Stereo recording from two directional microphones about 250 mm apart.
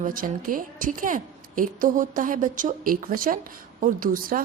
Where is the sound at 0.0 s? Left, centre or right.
Right.